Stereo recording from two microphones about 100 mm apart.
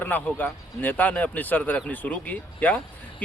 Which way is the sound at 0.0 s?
20° left (ahead or behind).